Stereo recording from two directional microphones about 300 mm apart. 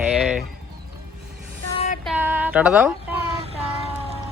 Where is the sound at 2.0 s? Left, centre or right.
Centre.